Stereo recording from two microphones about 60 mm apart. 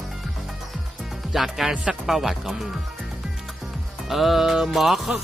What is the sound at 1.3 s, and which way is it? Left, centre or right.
Speech, centre.